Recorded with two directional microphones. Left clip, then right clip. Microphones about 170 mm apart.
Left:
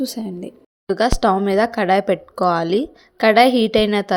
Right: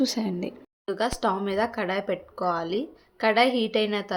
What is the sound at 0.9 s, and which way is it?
Speech, 45° left (ahead or behind).